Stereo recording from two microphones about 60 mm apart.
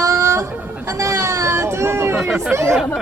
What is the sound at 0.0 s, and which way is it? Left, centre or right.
Chicken, right.